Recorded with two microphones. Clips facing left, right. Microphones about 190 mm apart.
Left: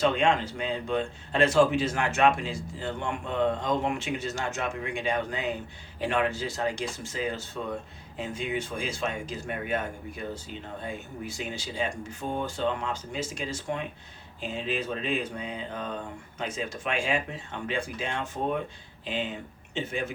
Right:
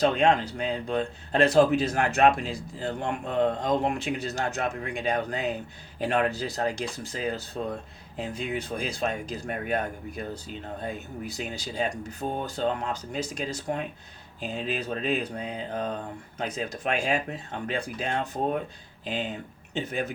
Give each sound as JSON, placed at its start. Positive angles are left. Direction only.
{"t": 0.0, "sound": "speech", "side_deg": -35}